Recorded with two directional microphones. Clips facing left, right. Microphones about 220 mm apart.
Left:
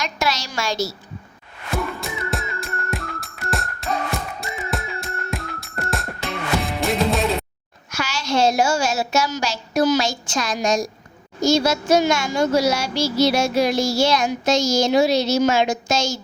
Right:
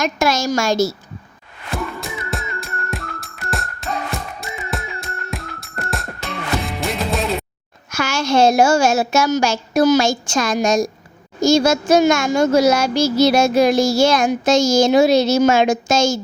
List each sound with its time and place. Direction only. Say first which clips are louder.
0.0 s speech: right 7 dB; 45° right (ahead or behind)
1.7 s music: even; centre (ahead or behind)
7.9 s speech: right 5 dB; 50° right (ahead or behind)